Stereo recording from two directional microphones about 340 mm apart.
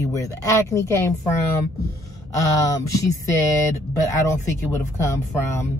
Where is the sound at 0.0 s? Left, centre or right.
Centre.